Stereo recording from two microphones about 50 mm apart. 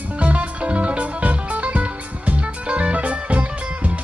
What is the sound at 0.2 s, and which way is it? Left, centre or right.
Music, right.